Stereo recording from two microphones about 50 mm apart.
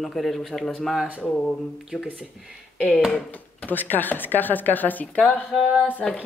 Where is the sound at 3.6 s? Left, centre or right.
Left.